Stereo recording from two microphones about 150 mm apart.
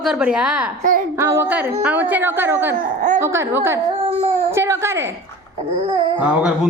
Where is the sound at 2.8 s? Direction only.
60° right (ahead or behind).